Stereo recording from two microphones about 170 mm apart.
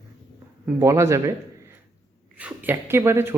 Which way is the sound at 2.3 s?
10° right (ahead or behind).